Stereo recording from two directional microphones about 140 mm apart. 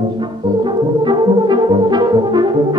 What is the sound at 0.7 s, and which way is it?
French horn, 35° right (ahead or behind).